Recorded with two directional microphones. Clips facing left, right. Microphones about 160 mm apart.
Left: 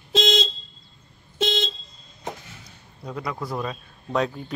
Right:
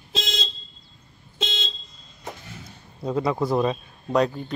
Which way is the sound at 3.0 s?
25° right (ahead or behind).